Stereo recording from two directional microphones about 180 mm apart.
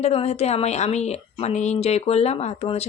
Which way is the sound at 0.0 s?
35° left (ahead or behind).